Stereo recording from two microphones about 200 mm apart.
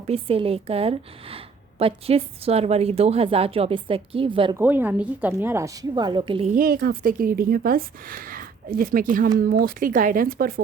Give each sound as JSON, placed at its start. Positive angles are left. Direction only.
{"t": 0.1, "sound": "speech", "side_deg": -30}
{"t": 4.5, "sound": "a woman's voice", "side_deg": -10}
{"t": 6.5, "sound": "speech", "side_deg": -45}